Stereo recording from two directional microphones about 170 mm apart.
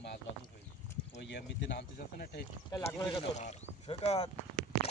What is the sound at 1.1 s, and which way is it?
Speech, 90° left.